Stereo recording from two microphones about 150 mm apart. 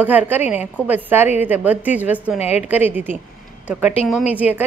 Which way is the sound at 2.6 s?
10° right (ahead or behind).